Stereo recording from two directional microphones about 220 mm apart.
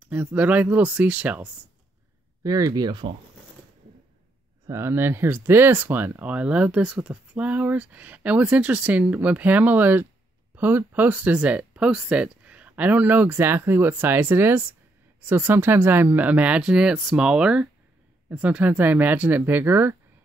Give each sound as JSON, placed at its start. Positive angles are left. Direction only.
{"t": 0.0, "sound": "speech", "side_deg": -5}
{"t": 4.6, "sound": "speech", "side_deg": -10}